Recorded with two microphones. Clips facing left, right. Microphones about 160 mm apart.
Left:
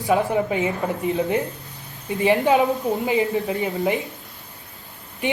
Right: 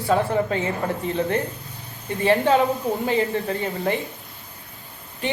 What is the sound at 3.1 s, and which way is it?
Speech, 20° left (ahead or behind).